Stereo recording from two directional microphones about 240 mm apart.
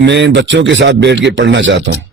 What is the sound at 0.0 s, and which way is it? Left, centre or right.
A man's voice, right.